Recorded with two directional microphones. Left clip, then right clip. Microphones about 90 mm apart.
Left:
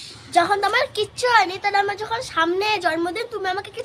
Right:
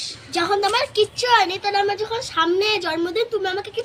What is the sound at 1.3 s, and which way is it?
Speech, 45° left (ahead or behind).